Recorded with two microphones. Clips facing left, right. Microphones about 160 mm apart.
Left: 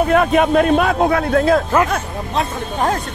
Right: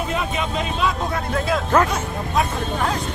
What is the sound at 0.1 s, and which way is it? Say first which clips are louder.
A man's voice: left 11 dB; 60° left (ahead or behind).